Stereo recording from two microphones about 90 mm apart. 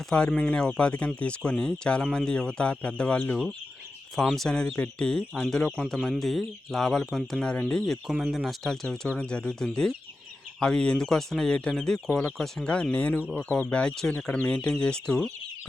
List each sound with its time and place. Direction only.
0.1 s speech: 10° left (ahead or behind)
4.1 s speech: centre (ahead or behind)
8.1 s speech: 5° right (ahead or behind)